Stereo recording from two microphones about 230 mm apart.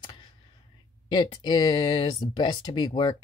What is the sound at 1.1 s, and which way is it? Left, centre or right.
Speech, centre.